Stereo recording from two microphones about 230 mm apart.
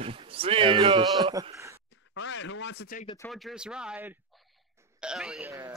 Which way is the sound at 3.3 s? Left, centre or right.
Centre.